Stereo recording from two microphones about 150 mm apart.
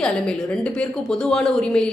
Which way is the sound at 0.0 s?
5° left (ahead or behind).